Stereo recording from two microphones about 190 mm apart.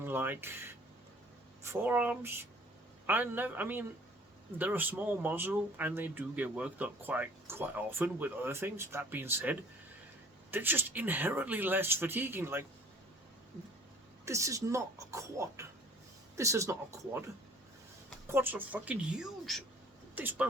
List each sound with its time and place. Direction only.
0.0 s a sound: 10° right (ahead or behind)
1.6 s speech: 10° right (ahead or behind)
14.3 s speech: 15° right (ahead or behind)
18.3 s speech: 10° right (ahead or behind)